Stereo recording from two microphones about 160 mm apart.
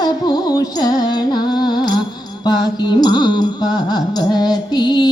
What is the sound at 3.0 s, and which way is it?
Music, 25° left (ahead or behind).